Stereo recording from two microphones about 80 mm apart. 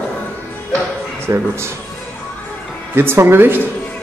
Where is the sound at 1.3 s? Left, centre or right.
Right.